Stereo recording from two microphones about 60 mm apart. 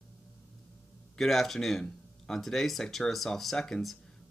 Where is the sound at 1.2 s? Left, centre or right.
Centre.